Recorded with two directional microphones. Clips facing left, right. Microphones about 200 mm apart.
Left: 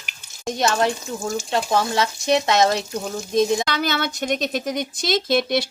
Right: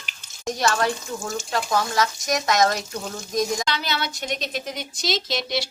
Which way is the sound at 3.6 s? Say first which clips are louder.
Left 4 dB; 50° left (ahead or behind).